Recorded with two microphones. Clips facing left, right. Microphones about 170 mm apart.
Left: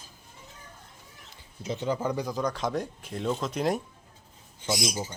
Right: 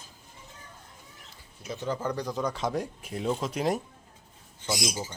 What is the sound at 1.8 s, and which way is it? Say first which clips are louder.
Speech: left 1 dB; 10° left (ahead or behind).